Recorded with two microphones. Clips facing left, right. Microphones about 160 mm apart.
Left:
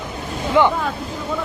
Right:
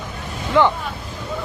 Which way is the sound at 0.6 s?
15° left (ahead or behind).